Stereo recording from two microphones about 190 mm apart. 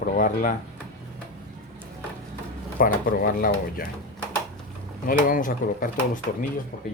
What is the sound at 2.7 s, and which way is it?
Speech, 50° left (ahead or behind).